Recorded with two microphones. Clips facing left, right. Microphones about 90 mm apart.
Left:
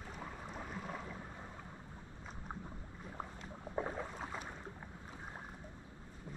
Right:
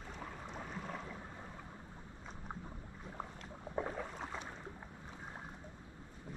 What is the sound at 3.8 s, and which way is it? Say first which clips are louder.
Boat: even; 5° left (ahead or behind).